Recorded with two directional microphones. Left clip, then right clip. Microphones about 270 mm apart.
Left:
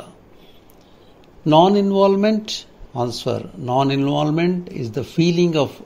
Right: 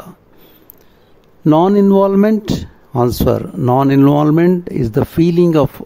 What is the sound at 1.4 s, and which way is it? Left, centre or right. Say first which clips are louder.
Speech: right 2 dB; right.